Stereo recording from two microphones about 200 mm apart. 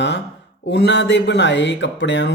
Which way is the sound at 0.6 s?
60° left (ahead or behind).